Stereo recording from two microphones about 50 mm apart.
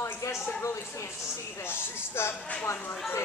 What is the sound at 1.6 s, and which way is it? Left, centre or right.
Speech, left.